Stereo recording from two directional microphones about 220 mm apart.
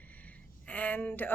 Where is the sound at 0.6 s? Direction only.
5° left (ahead or behind).